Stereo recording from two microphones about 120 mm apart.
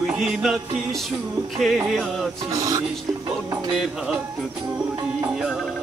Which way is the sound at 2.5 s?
30° right (ahead or behind).